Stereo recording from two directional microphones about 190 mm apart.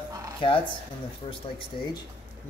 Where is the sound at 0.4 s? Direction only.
25° left (ahead or behind).